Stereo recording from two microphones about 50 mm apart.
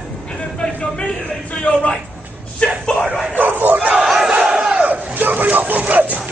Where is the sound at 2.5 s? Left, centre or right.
Centre.